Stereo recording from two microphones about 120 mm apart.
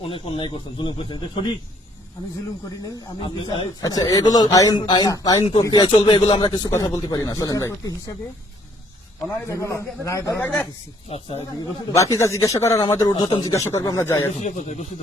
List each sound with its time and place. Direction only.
0.0 s speech: 50° left (ahead or behind)
2.6 s speech: 35° left (ahead or behind)
9.5 s a man's voice: 25° left (ahead or behind)
11.1 s speech: 60° left (ahead or behind)
11.9 s a man's voice: 25° left (ahead or behind); by 13.5 s 40° left (ahead or behind)
13.5 s a man's voice: 25° left (ahead or behind)
14.3 s speech: 75° left (ahead or behind)